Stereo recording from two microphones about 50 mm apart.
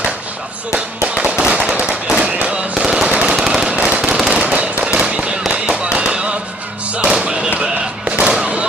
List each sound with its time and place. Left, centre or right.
0.7 s firecracker: right
1.7 s firecracker: right
2.0 s fireworks: right
3.1 s a sound: right
3.5 s firecracker: right
4.0 s firecracker: centre
4.4 s fireworks: right
6.9 s music: right
7.6 s fireworks: centre